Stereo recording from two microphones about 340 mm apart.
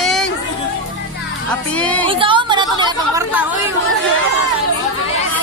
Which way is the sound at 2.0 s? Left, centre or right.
Centre.